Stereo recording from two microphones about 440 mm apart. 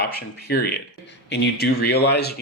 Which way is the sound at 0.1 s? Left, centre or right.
Left.